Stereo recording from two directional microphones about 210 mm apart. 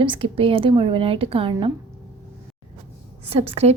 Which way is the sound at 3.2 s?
30° right (ahead or behind).